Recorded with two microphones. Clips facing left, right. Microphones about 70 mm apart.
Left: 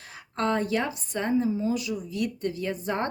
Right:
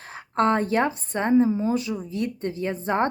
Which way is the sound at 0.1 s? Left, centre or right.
Right.